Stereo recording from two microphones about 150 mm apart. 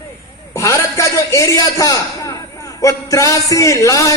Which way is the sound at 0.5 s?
20° left (ahead or behind).